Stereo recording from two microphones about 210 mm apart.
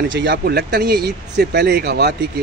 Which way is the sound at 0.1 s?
60° right (ahead or behind).